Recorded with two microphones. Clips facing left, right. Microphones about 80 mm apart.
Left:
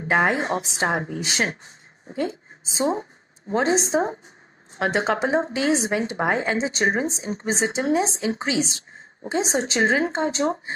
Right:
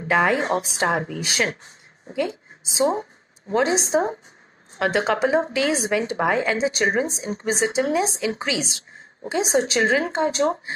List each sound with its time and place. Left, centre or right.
0.1 s a woman's voice: left
2.8 s speech: right
3.5 s a woman's voice: left